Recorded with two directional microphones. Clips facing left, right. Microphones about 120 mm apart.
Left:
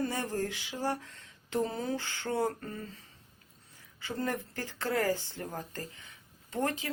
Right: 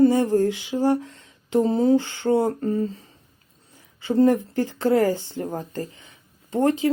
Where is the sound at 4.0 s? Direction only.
25° right (ahead or behind).